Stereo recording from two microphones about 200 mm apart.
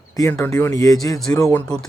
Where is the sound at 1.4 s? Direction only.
5° left (ahead or behind).